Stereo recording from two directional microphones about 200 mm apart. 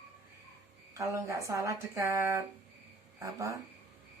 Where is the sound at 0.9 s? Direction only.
15° right (ahead or behind).